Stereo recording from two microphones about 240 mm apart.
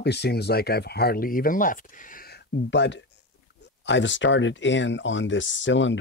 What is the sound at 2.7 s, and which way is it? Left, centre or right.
Speech, left.